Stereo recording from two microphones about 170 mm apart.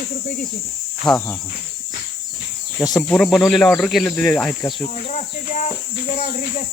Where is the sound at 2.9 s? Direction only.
Centre (ahead or behind).